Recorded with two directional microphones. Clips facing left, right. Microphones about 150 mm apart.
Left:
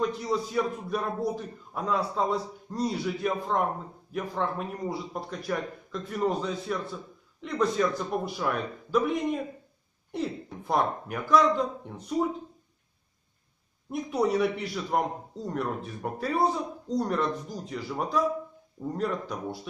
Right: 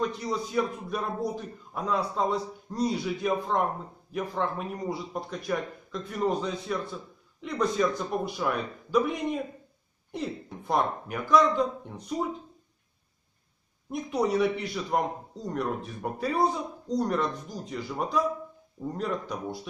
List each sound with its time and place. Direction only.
0.0 s speech: centre (ahead or behind)
10.7 s speech: centre (ahead or behind)
13.8 s speech: centre (ahead or behind)